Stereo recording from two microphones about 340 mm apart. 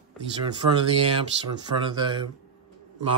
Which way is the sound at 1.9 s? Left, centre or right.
Centre.